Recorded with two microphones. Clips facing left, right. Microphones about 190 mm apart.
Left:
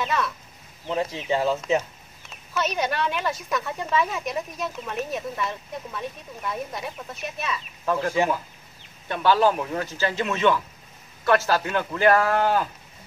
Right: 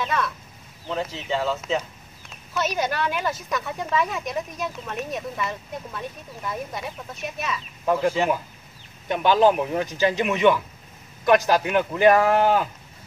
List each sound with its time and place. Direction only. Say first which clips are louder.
0.0 s speech: even; centre (ahead or behind)
0.8 s speech: left 2 dB; 15° left (ahead or behind)
2.2 s speech: right 1 dB; centre (ahead or behind)
7.8 s speech: right 4 dB; 15° right (ahead or behind)
9.1 s speech: right 2 dB; 20° right (ahead or behind)